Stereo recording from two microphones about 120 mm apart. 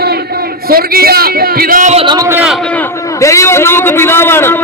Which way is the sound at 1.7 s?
85° right.